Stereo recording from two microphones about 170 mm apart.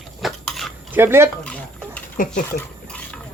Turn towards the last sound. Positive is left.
turn(degrees=10)  # may be behind; listen again after turning